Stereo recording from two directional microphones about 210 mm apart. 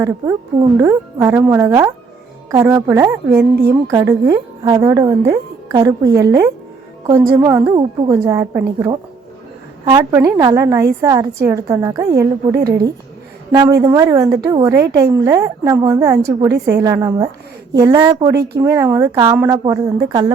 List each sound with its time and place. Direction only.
0.0 s a woman's voice: 15° right (ahead or behind)